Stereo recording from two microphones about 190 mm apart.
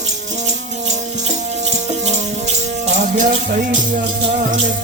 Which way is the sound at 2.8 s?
40° right (ahead or behind).